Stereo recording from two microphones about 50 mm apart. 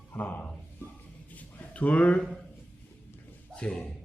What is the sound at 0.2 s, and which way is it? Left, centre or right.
Speech, left.